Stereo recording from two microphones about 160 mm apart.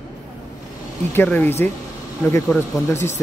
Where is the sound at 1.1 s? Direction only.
10° left (ahead or behind).